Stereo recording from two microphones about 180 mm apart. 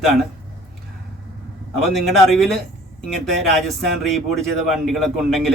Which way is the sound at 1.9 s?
Centre (ahead or behind).